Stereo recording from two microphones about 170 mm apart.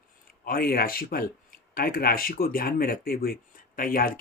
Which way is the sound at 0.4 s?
60° left (ahead or behind).